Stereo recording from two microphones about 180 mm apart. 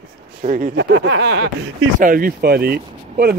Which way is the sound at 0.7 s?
75° right (ahead or behind).